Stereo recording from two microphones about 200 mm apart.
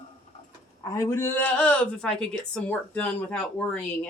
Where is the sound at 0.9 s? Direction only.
15° left (ahead or behind).